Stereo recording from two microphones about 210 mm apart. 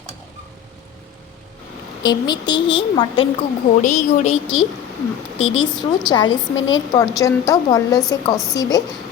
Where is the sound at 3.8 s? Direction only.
35° left (ahead or behind).